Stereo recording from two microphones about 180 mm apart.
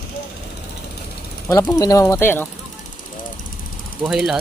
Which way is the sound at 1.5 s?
20° left (ahead or behind).